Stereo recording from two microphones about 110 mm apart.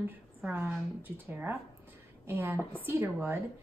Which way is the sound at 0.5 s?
15° right (ahead or behind).